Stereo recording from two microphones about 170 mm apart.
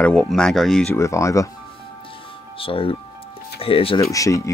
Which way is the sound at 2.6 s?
30° left (ahead or behind).